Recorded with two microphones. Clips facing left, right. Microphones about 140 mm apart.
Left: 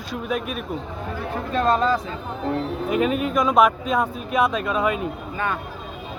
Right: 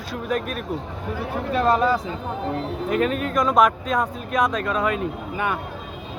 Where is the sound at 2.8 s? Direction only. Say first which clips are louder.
Left 1 dB; 10° left (ahead or behind).